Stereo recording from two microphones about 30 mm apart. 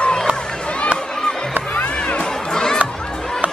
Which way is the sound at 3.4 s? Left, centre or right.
Right.